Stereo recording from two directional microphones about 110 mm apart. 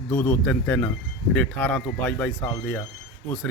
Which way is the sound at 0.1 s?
20° left (ahead or behind).